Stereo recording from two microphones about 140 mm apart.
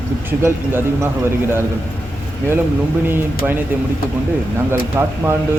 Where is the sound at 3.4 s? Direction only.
5° right (ahead or behind).